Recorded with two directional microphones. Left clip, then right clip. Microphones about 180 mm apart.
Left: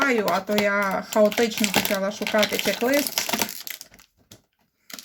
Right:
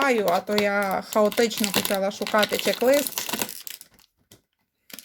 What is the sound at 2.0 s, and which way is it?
Speech, 30° right (ahead or behind).